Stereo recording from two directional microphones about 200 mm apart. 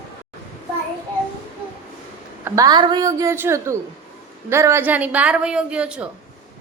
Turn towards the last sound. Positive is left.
turn(degrees=-5)  # may be behind; listen again after turning